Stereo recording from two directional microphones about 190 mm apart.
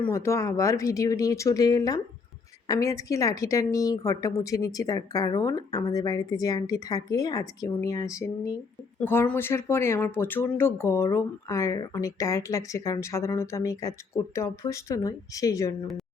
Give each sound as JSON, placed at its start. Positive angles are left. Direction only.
{"t": 0.0, "sound": "a woman's voice", "side_deg": 15}